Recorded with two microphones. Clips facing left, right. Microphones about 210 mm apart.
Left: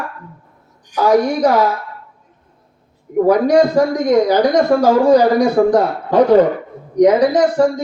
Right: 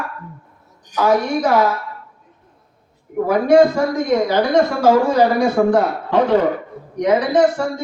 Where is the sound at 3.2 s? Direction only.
40° left (ahead or behind).